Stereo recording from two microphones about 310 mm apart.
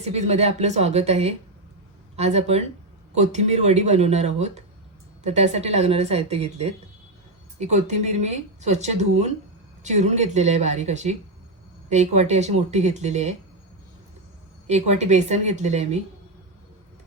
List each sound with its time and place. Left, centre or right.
0.0 s speech: right
14.7 s speech: right